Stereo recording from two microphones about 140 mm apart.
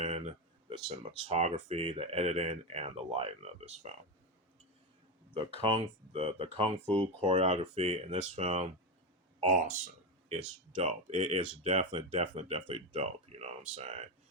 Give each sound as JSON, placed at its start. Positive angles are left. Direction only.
{"t": 0.0, "sound": "a sound", "side_deg": -55}
{"t": 1.1, "sound": "speech", "side_deg": -50}
{"t": 5.5, "sound": "speech", "side_deg": -45}
{"t": 10.8, "sound": "speech", "side_deg": -50}
{"t": 11.9, "sound": "speech", "side_deg": -40}